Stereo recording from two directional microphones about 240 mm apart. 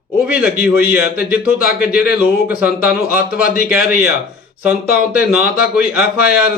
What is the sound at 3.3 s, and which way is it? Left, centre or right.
Speech, left.